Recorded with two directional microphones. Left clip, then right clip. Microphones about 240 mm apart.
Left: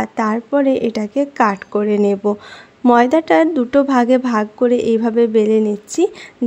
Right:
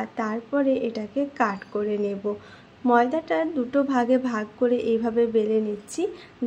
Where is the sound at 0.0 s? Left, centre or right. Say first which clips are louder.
Left 10 dB; left.